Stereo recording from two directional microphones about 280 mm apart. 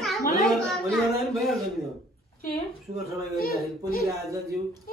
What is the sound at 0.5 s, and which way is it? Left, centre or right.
Speech, centre.